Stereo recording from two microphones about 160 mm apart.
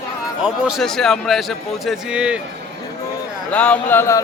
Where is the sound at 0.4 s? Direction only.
Centre (ahead or behind).